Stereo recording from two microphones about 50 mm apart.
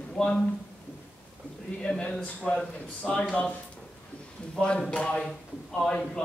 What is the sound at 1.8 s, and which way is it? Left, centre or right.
Speech, left.